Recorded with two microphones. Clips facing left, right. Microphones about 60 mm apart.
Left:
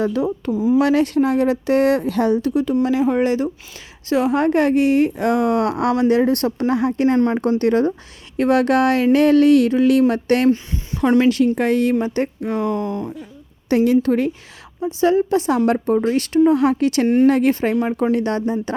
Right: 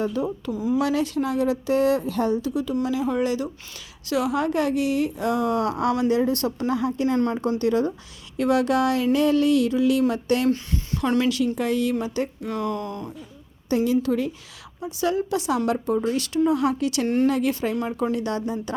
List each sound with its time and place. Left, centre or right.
0.0 s speech: left
0.4 s speech: left
0.8 s speech: left
2.5 s speech: left
10.5 s speech: left
11.2 s speech: left
12.5 s speech: left
13.7 s speech: left
14.8 s speech: left